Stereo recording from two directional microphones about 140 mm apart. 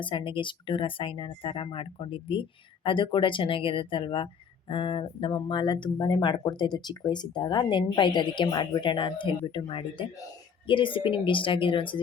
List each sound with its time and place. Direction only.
0.0 s speech: 35° left (ahead or behind)